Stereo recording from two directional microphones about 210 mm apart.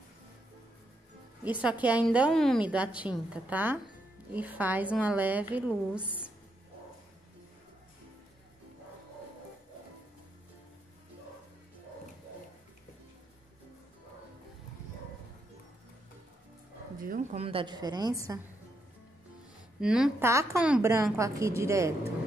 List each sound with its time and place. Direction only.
1.4 s a woman's voice: 5° right (ahead or behind)
17.0 s a sound: 40° right (ahead or behind)
17.4 s a woman's voice: 25° right (ahead or behind)
19.8 s a woman's voice: 5° right (ahead or behind)